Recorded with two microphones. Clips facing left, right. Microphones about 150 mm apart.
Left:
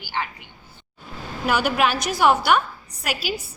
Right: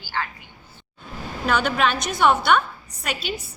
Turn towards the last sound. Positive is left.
turn(degrees=5)  # may be behind; listen again after turning